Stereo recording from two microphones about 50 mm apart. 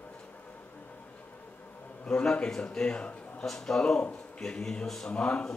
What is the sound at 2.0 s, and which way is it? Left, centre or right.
Speech, left.